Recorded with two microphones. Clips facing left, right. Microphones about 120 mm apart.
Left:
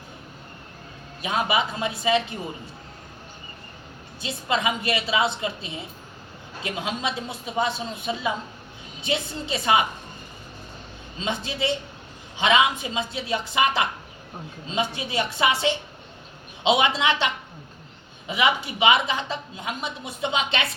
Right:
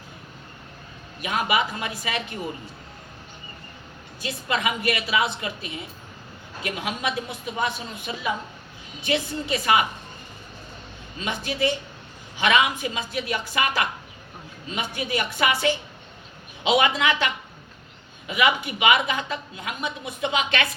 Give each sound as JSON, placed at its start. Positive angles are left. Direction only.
{"t": 1.2, "sound": "a woman's voice", "side_deg": 25}
{"t": 4.2, "sound": "a woman's voice", "side_deg": 25}
{"t": 11.2, "sound": "a woman's voice", "side_deg": 25}